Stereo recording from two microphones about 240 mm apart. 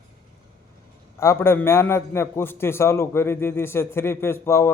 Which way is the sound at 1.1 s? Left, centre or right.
Centre.